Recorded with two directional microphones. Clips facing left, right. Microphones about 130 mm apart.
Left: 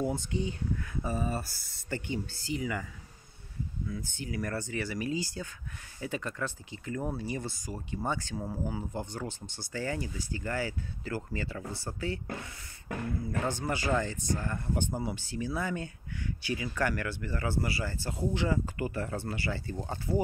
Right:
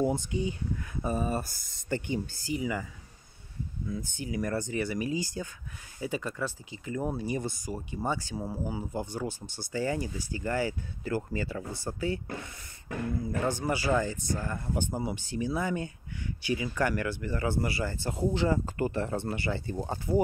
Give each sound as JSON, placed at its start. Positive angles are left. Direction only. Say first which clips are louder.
{"t": 0.0, "sound": "speech", "louder": "right 3 dB", "side_deg": -15}
{"t": 3.9, "sound": "speech", "louder": "right 6 dB", "side_deg": -20}
{"t": 13.5, "sound": "speech", "louder": "right 3 dB", "side_deg": -10}